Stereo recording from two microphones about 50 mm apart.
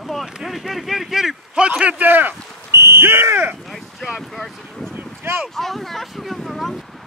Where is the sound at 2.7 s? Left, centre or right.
Right.